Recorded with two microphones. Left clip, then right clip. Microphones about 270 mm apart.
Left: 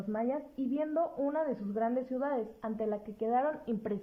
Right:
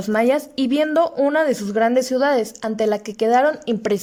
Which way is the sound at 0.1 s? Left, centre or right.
Right.